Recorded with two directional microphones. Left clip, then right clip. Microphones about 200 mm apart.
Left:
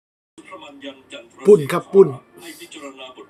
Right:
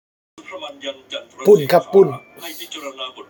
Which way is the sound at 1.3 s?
35° left (ahead or behind).